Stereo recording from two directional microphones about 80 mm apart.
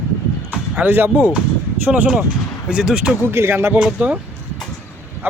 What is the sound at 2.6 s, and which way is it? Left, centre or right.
Speech, centre.